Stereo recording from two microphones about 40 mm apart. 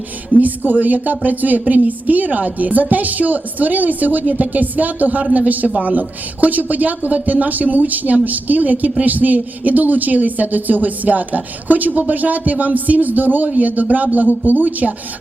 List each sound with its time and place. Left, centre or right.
0.3 s speech: right